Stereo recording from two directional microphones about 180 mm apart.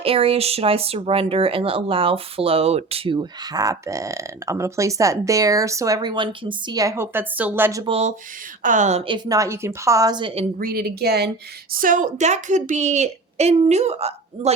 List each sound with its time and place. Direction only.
0.0 s speech: 30° right (ahead or behind); by 7.9 s 15° right (ahead or behind)
7.9 s a woman's voice: 35° right (ahead or behind)
10.6 s speech: 55° right (ahead or behind)
11.7 s a woman's voice: 50° right (ahead or behind)